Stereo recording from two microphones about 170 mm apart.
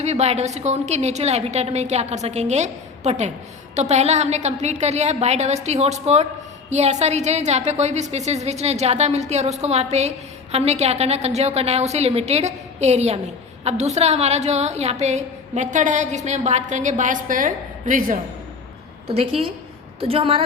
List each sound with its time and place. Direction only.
0.0 s a woman's voice: 40° right (ahead or behind)
19.0 s a woman's voice: 35° right (ahead or behind)